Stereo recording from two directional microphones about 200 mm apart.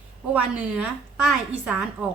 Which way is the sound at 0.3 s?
5° right (ahead or behind).